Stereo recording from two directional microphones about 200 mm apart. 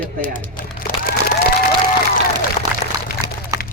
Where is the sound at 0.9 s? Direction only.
40° left (ahead or behind).